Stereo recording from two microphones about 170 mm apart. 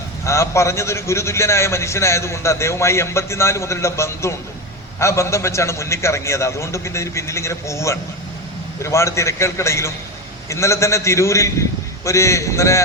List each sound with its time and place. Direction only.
0.3 s a man's voice: 15° left (ahead or behind)